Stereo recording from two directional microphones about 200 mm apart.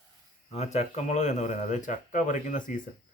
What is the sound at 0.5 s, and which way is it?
Speech, 35° left (ahead or behind).